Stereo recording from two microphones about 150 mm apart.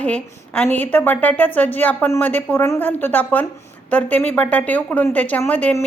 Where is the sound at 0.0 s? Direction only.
10° left (ahead or behind).